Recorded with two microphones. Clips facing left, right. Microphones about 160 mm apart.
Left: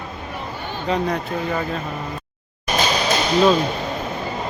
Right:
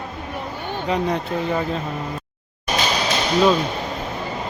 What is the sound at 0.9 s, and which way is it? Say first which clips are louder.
Speech: even; 20° right (ahead or behind).